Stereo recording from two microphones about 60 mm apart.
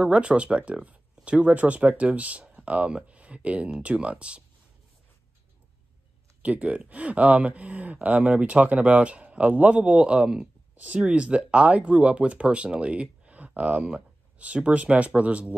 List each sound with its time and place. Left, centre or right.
0.0 s speech: centre
6.4 s speech: right